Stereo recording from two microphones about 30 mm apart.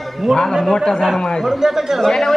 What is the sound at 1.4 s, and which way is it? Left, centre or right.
Speech, centre.